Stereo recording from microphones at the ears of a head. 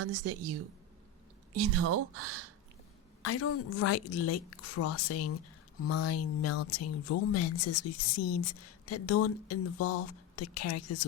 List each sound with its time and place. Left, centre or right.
0.0 s speech: right
3.2 s a woman's voice: left